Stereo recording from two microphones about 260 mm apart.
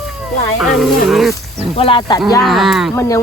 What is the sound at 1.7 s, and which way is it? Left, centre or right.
Speech, centre.